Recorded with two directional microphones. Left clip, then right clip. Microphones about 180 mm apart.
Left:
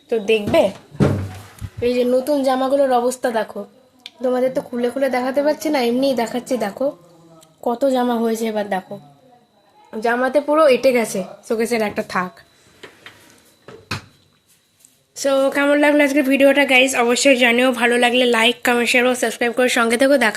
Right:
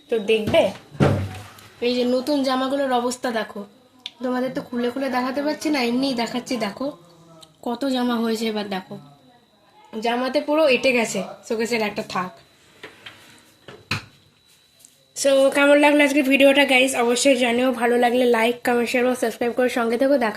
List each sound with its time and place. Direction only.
0.1 s a woman's voice: 20° left (ahead or behind)
1.8 s a woman's voice: 10° left (ahead or behind)
9.9 s a woman's voice: 10° left (ahead or behind); by 12.2 s 30° left (ahead or behind)
15.1 s a woman's voice: 10° left (ahead or behind)